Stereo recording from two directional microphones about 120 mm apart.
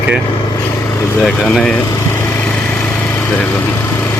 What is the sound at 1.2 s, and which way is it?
Speech, 5° left (ahead or behind).